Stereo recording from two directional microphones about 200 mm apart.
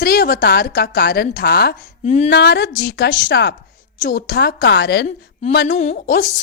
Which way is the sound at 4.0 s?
45° left (ahead or behind).